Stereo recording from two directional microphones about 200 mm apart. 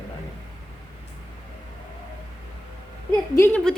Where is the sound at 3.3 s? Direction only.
10° left (ahead or behind).